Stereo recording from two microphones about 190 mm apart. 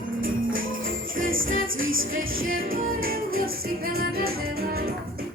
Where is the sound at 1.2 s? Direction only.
90° right.